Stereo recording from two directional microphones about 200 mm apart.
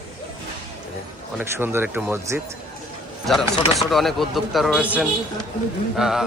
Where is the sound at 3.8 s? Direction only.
Centre (ahead or behind).